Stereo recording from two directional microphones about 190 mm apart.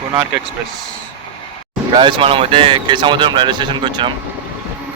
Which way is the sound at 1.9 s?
25° right (ahead or behind).